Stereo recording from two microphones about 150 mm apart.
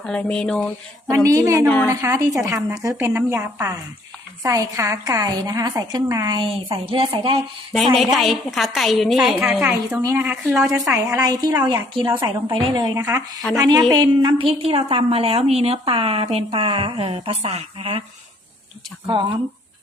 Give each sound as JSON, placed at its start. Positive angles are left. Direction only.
{"t": 0.0, "sound": "speech", "side_deg": 5}
{"t": 1.1, "sound": "a woman's voice", "side_deg": -20}
{"t": 1.6, "sound": "speech", "side_deg": 10}
{"t": 1.9, "sound": "a woman's voice", "side_deg": -20}
{"t": 7.9, "sound": "a woman's voice", "side_deg": 0}
{"t": 10.0, "sound": "a woman's voice", "side_deg": -15}
{"t": 19.0, "sound": "a woman's voice", "side_deg": -30}